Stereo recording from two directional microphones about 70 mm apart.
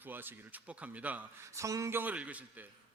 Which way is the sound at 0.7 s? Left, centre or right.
Centre.